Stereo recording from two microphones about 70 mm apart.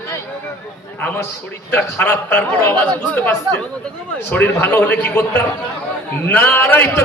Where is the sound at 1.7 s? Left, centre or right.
Left.